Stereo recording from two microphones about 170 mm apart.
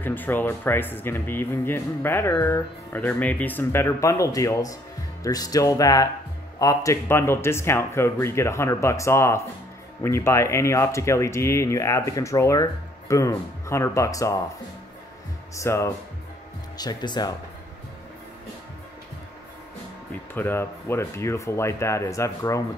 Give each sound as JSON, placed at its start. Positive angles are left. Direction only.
{"t": 0.0, "sound": "speech", "side_deg": 10}
{"t": 15.5, "sound": "speech", "side_deg": 15}
{"t": 20.1, "sound": "speech", "side_deg": 10}